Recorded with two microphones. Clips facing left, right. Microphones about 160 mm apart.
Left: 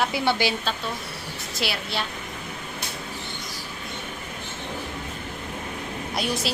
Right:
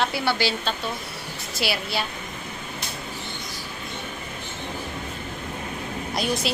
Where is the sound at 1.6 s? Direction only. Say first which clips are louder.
Right 2 dB; 5° right (ahead or behind).